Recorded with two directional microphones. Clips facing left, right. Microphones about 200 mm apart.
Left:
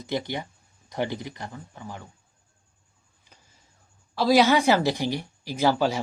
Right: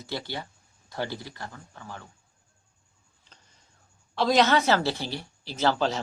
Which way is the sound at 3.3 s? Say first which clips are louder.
Left 2 dB; 10° left (ahead or behind).